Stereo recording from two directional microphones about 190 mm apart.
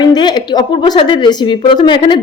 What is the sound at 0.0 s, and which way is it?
A woman's voice, 20° left (ahead or behind).